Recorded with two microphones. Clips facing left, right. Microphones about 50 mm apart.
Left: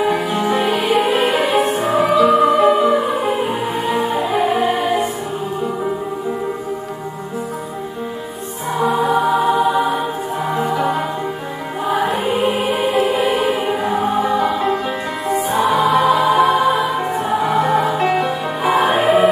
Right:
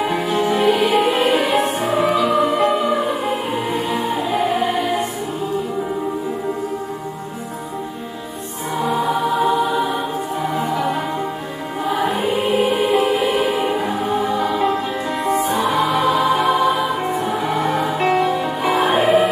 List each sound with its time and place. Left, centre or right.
0.0 s music: centre
3.7 s music: left
4.0 s music: centre
8.7 s music: centre